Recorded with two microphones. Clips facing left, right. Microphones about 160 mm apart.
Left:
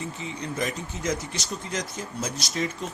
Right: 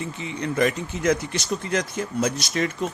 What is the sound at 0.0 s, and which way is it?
A man's voice, 65° right (ahead or behind).